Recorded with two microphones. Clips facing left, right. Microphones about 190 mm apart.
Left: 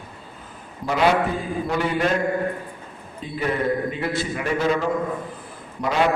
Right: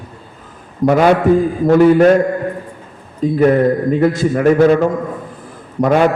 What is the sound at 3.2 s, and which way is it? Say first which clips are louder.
A man's voice: right 13 dB; 50° right (ahead or behind).